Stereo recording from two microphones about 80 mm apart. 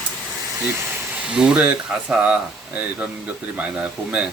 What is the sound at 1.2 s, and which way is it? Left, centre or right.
Speech, centre.